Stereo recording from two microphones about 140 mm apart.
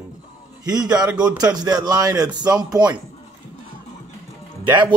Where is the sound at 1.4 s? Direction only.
30° right (ahead or behind).